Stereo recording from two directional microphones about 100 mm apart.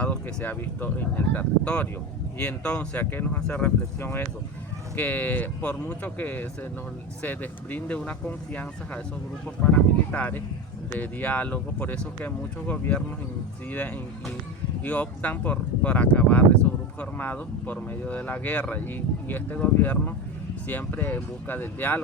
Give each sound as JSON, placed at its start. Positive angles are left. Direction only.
{"t": 0.0, "sound": "speech", "side_deg": 15}
{"t": 10.1, "sound": "speech", "side_deg": 15}